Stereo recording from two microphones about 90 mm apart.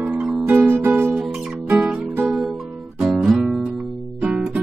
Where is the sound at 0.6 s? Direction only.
20° right (ahead or behind).